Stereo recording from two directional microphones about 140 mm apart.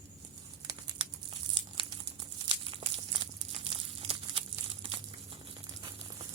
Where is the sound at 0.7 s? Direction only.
35° right (ahead or behind).